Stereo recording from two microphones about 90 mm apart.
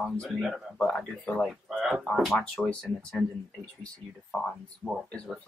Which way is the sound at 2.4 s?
10° left (ahead or behind).